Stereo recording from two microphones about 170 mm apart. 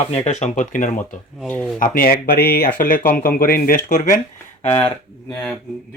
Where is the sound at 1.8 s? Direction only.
55° left (ahead or behind).